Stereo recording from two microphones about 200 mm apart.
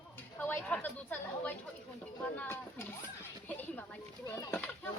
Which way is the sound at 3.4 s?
10° left (ahead or behind).